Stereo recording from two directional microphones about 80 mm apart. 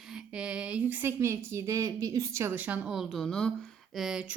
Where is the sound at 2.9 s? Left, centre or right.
Centre.